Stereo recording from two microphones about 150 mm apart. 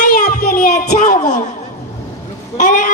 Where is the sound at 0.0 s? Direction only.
60° left (ahead or behind).